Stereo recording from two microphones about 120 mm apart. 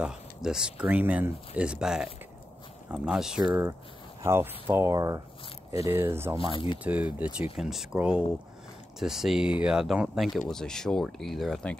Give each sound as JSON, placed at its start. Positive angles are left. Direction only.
{"t": 0.0, "sound": "speech", "side_deg": -5}
{"t": 4.2, "sound": "speech", "side_deg": -20}
{"t": 6.5, "sound": "speech", "side_deg": 45}
{"t": 6.8, "sound": "speech", "side_deg": -10}